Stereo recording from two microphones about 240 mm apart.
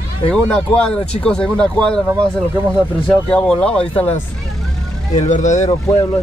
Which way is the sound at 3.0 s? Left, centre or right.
Centre.